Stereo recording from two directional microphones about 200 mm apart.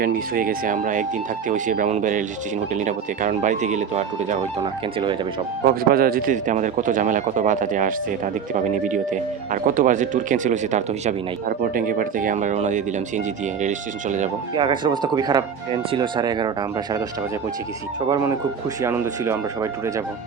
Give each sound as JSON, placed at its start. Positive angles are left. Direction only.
{"t": 0.0, "sound": "a man's voice", "side_deg": -45}
{"t": 5.6, "sound": "a man's voice", "side_deg": -50}
{"t": 14.5, "sound": "speech", "side_deg": -25}
{"t": 18.1, "sound": "speech", "side_deg": -15}